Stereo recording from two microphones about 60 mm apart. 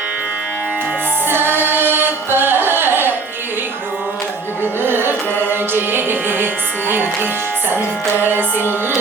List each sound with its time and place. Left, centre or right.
1.3 s music: right
4.8 s music: right
8.3 s music: right